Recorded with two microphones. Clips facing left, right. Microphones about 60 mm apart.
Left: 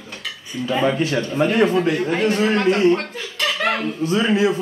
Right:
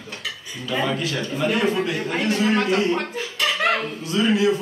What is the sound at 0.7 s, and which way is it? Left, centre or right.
A man's voice, left.